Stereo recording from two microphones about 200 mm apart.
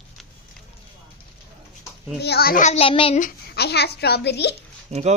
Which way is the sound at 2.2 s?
50° left (ahead or behind).